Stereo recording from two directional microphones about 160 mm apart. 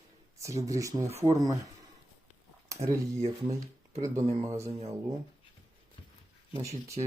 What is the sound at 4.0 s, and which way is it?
Speech, 20° right (ahead or behind).